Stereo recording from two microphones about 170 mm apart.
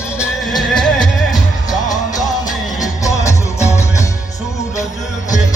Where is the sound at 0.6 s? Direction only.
Centre (ahead or behind).